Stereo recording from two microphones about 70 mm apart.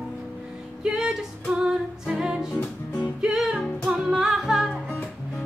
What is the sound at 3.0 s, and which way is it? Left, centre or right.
Music, centre.